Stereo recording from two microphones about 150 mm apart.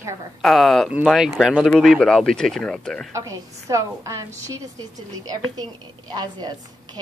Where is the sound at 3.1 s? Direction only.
20° right (ahead or behind).